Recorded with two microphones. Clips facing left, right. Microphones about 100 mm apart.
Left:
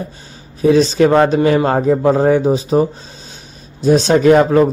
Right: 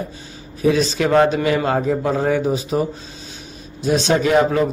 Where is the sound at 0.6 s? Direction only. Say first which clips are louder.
Left 6 dB; 35° left (ahead or behind).